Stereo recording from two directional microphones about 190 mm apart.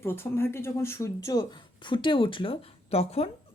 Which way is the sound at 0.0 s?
10° left (ahead or behind).